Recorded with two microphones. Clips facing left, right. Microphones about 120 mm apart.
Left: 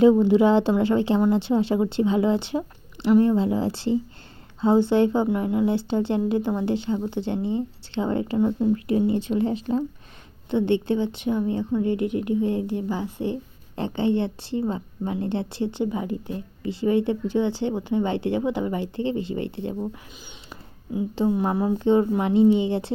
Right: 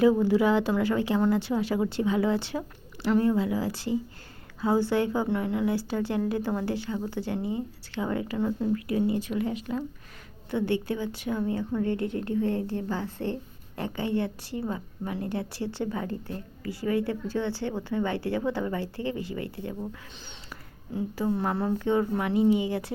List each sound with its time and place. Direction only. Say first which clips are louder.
0.0 s a woman's voice: left 5 dB; 20° left (ahead or behind)
8.4 s a woman's voice: left 6 dB; 15° left (ahead or behind)